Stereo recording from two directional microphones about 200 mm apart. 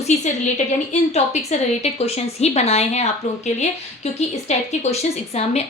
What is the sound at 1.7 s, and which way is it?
A woman's voice, 30° left (ahead or behind).